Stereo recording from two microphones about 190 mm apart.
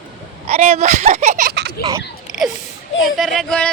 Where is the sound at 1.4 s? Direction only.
60° right (ahead or behind).